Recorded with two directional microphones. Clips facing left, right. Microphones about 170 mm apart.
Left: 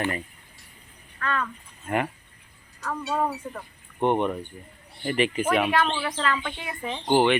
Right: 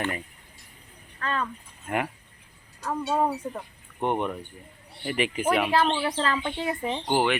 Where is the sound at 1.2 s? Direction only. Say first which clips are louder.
Left 1 dB; 30° right (ahead or behind).